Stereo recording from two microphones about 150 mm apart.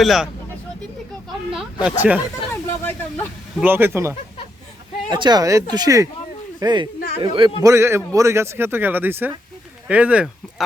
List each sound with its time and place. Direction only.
0.0 s speech: centre (ahead or behind)
1.5 s a man's voice: 5° right (ahead or behind)
2.5 s speech: 15° left (ahead or behind)
3.6 s a man's voice: 15° right (ahead or behind)
5.1 s a man's voice: 30° right (ahead or behind)
7.6 s a man's voice: 20° right (ahead or behind)